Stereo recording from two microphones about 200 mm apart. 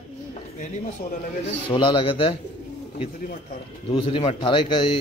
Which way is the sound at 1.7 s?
25° left (ahead or behind).